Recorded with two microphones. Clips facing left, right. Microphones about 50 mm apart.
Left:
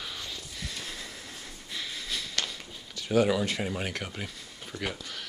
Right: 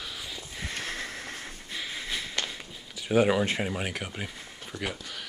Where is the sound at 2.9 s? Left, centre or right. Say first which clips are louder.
Right 2 dB; right.